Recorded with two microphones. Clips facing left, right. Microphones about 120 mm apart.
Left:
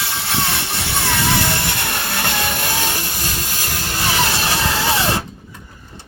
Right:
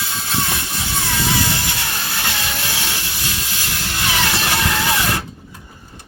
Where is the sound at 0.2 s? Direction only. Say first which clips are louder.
Left 1 dB; 70° left (ahead or behind); by 4.0 s 45° left (ahead or behind).